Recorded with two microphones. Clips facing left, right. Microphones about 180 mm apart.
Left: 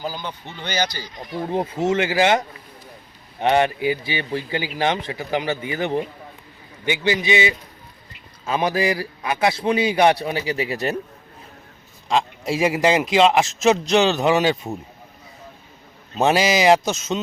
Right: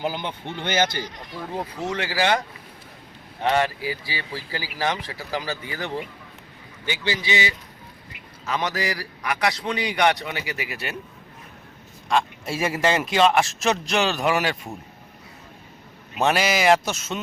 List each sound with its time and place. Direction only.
0.4 s speech: 50° right (ahead or behind)
1.4 s a man's voice: 25° left (ahead or behind)
3.4 s a man's voice: 20° left (ahead or behind)
12.0 s a man's voice: 20° left (ahead or behind)
16.1 s a man's voice: 25° left (ahead or behind)